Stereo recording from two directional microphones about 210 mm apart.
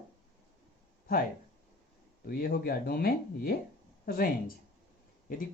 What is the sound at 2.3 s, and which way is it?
Speech, 45° left (ahead or behind).